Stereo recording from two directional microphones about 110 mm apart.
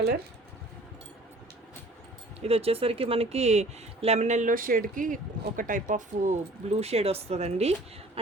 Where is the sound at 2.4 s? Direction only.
65° right (ahead or behind); by 4.4 s 90° right.